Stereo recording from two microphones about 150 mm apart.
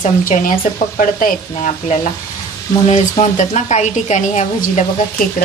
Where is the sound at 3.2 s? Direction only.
50° left (ahead or behind).